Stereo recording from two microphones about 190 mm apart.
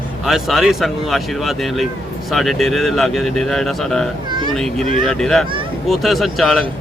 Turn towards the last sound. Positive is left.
turn(degrees=0)  # may be behind; listen again after turning